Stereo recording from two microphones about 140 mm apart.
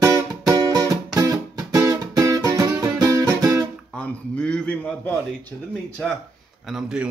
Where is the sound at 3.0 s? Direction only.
25° right (ahead or behind).